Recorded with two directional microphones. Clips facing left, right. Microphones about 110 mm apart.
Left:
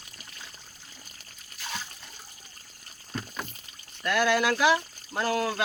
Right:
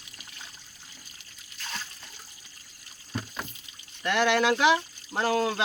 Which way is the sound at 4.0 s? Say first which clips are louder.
Right 1 dB; 25° right (ahead or behind).